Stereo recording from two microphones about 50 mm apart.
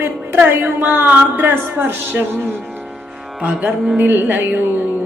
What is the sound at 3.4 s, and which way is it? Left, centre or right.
Music, right.